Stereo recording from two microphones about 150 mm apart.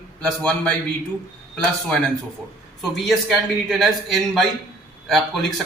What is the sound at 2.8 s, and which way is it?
A man's voice, centre (ahead or behind).